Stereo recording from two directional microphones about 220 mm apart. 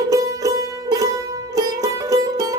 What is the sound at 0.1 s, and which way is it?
Music, 15° right (ahead or behind).